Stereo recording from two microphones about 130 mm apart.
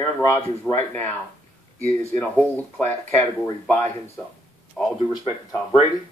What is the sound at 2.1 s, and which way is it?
Speech, 15° left (ahead or behind).